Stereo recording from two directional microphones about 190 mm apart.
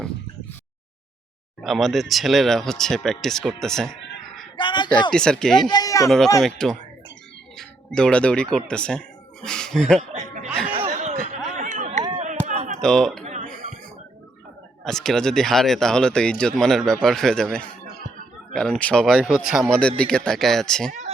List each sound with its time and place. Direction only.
1.6 s speech: centre (ahead or behind)
4.5 s a sound: 25° left (ahead or behind)
5.1 s speech: 5° left (ahead or behind)
5.6 s speech: 20° left (ahead or behind)
6.1 s speech: centre (ahead or behind)
10.2 s a sound: 40° right (ahead or behind)
12.8 s speech: centre (ahead or behind)
13.2 s music: 40° right (ahead or behind)
14.8 s speech: centre (ahead or behind)